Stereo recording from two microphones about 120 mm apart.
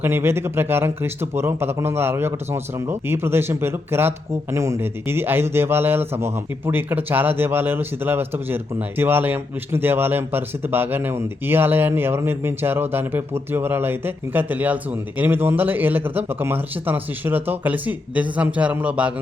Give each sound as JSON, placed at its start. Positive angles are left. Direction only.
{"t": 0.0, "sound": "a man's voice", "side_deg": -20}